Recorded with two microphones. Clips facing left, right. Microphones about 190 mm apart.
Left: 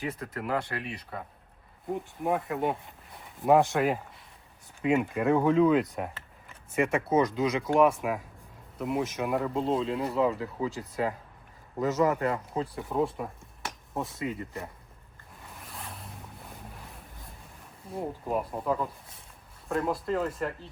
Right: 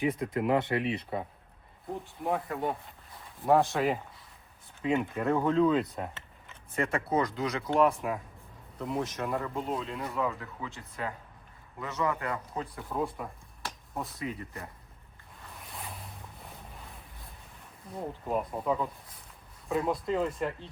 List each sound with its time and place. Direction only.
0.0 s speech: 10° right (ahead or behind)
0.4 s speech: 25° right (ahead or behind)
1.9 s speech: 5° left (ahead or behind)
3.4 s speech: 20° left (ahead or behind)
3.7 s speech: centre (ahead or behind)
5.8 s speech: centre (ahead or behind)
6.7 s speech: 20° left (ahead or behind)
9.2 s speech: 15° left (ahead or behind)
9.6 s speech: 25° left (ahead or behind)
12.3 s speech: 25° left (ahead or behind)
15.6 s ocean: centre (ahead or behind)
17.9 s speech: centre (ahead or behind)